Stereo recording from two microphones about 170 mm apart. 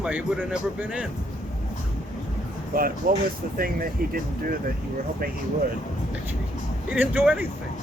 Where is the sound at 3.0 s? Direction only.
55° right (ahead or behind).